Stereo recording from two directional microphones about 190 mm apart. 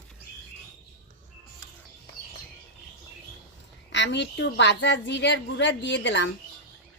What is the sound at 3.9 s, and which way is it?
A woman's voice, 70° left (ahead or behind).